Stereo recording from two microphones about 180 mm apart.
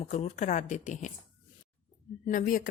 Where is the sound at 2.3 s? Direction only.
50° left (ahead or behind).